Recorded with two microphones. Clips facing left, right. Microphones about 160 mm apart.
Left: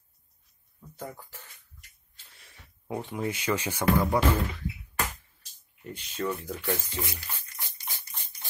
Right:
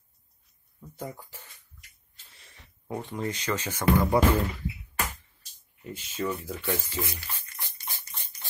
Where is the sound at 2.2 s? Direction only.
Centre (ahead or behind).